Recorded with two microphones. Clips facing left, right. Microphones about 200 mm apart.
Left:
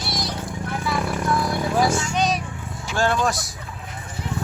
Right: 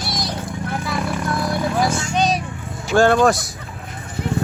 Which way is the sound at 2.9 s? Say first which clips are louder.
Right 8 dB; 55° right (ahead or behind).